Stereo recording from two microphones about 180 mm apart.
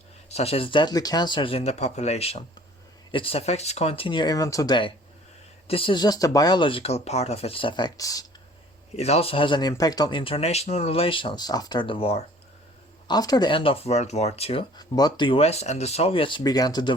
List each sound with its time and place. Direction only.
0.3 s speech: 35° left (ahead or behind); by 8.3 s 20° left (ahead or behind)
9.0 s speech: 35° left (ahead or behind)
14.8 s speech: 20° left (ahead or behind)